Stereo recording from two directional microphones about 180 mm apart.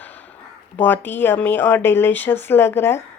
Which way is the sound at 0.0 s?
10° left (ahead or behind).